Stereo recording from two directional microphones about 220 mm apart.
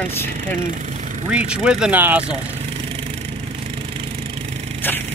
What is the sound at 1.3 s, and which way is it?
Speech, 5° right (ahead or behind).